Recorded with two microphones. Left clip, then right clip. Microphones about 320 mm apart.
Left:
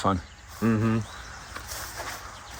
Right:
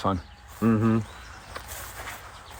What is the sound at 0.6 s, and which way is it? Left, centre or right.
Speech, right.